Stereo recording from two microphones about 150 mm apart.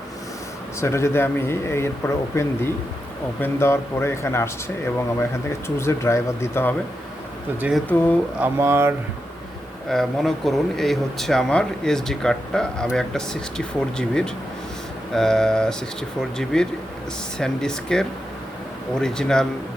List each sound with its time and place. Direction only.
0.8 s speech: 20° left (ahead or behind)
7.9 s speech: 10° left (ahead or behind)
8.4 s speech: 15° right (ahead or behind)
9.9 s speech: centre (ahead or behind)